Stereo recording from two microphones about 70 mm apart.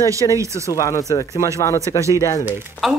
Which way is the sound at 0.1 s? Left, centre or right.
Right.